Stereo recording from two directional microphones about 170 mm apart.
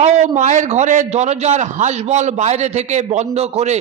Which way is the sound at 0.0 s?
45° right (ahead or behind).